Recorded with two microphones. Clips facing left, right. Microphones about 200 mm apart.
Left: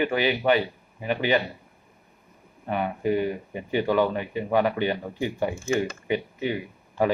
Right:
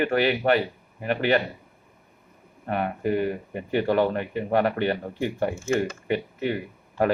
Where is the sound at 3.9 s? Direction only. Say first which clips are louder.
Even; 45° right (ahead or behind).